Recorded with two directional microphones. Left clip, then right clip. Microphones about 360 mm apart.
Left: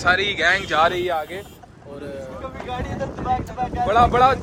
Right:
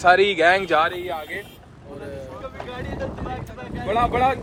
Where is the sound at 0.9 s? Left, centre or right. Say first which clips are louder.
Left 6 dB; left.